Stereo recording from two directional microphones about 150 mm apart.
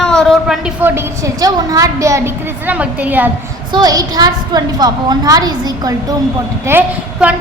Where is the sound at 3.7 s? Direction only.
25° right (ahead or behind).